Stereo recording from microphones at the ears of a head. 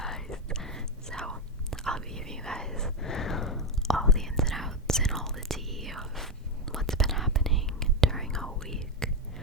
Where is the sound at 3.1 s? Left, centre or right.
Left.